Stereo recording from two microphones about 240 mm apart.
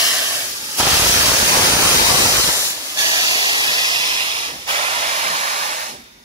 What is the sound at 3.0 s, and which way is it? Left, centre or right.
Hiss, centre.